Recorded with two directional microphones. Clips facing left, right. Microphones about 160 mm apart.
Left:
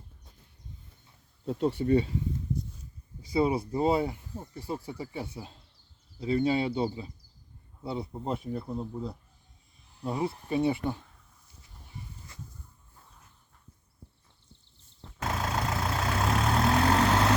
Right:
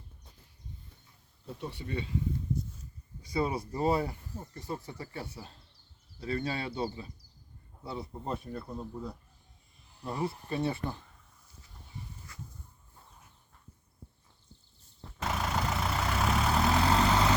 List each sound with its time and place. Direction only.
1.5 s speech: 80° left
1.7 s speech: 45° left (ahead or behind)
3.2 s speech: 25° left (ahead or behind)
15.2 s vehicle: 5° left (ahead or behind)